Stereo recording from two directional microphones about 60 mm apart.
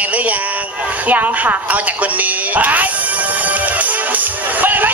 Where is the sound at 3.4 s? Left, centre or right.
Right.